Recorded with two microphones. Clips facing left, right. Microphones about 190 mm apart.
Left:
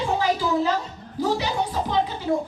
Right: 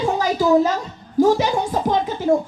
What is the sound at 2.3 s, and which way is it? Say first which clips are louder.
Speech: right 8 dB; 45° right (ahead or behind).